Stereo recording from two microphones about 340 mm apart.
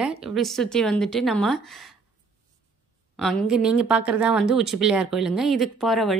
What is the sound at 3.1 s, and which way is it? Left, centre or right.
A woman's voice, centre.